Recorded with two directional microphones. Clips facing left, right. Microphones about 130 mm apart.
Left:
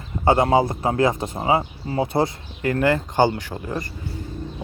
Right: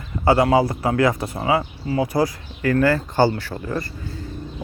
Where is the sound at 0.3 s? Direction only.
25° left (ahead or behind).